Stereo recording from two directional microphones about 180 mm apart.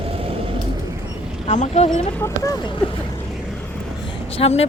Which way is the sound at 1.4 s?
40° left (ahead or behind).